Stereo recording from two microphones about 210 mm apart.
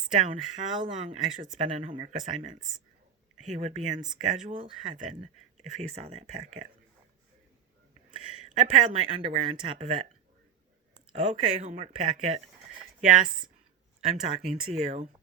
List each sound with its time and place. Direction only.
0.1 s speech: 35° right (ahead or behind)
8.1 s a sound: 25° right (ahead or behind)
8.7 s speech: 30° right (ahead or behind)
11.1 s speech: 30° right (ahead or behind)
14.1 s speech: 35° right (ahead or behind)